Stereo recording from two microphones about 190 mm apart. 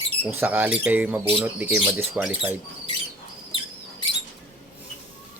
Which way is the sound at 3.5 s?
25° left (ahead or behind).